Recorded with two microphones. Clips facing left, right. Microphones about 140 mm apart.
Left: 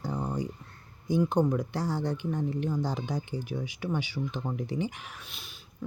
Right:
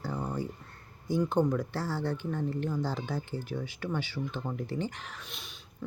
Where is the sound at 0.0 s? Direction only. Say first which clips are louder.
Left 2 dB; 15° left (ahead or behind).